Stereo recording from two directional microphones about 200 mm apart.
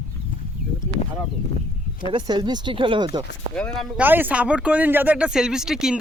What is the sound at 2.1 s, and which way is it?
Speech, 20° right (ahead or behind).